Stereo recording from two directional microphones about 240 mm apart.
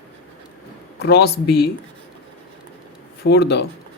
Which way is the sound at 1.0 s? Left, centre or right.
Left.